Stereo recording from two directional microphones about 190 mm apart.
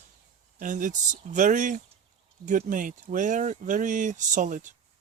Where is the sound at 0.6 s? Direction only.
45° right (ahead or behind).